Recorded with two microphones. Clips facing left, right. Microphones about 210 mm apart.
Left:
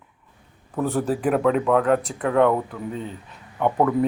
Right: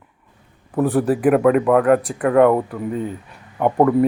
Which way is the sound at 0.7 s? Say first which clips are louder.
Right 6 dB; 10° right (ahead or behind).